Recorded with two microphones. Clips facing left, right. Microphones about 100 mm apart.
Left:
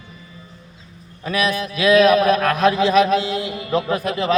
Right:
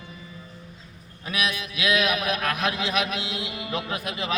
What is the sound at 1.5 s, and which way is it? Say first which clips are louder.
Mantra: left 10 dB; 40° left (ahead or behind).